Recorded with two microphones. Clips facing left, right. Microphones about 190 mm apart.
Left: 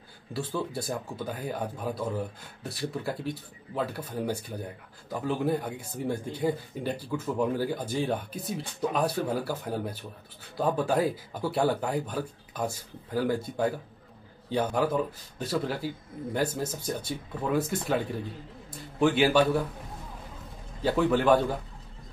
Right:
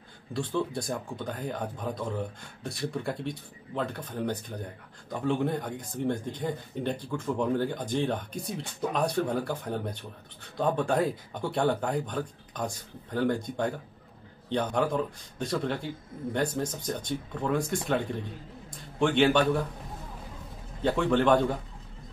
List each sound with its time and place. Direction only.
0.3 s speech: 5° left (ahead or behind)
20.8 s speech: 5° left (ahead or behind)